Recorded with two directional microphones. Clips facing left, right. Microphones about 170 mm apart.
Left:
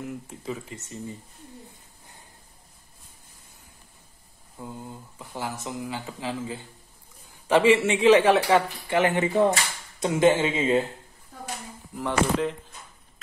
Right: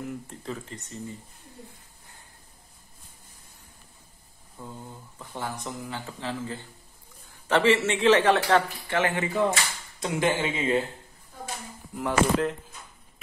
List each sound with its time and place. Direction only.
0.0 s speech: centre (ahead or behind)
4.6 s speech: 10° left (ahead or behind)
11.9 s speech: centre (ahead or behind)